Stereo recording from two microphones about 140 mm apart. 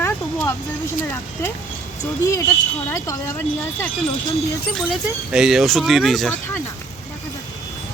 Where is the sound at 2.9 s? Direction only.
25° left (ahead or behind).